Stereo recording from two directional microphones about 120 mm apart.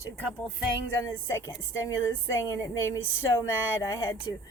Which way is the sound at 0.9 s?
20° left (ahead or behind).